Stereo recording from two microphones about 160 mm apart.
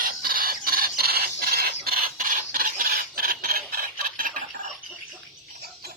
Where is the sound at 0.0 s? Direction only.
65° right (ahead or behind).